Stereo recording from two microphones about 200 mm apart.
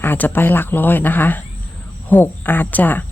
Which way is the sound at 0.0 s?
10° left (ahead or behind).